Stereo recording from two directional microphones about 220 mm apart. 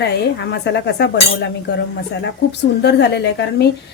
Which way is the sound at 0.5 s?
50° left (ahead or behind).